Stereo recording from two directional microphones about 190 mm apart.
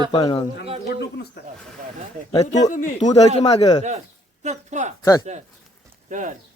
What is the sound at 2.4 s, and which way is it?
Speech, 40° left (ahead or behind).